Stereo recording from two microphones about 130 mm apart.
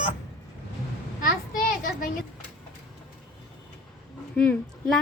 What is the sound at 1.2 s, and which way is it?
Children playing, 90° left.